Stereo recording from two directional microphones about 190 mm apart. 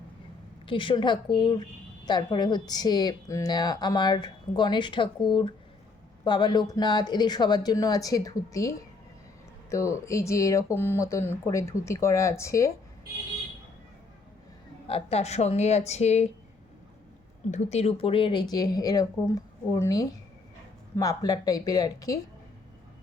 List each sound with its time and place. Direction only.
0.7 s a woman's voice: 25° left (ahead or behind)
14.8 s a woman's voice: 30° left (ahead or behind)
17.5 s a woman's voice: 35° left (ahead or behind); by 22.2 s 20° left (ahead or behind)